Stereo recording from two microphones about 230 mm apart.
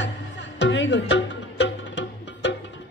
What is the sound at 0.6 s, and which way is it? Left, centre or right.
Music, left.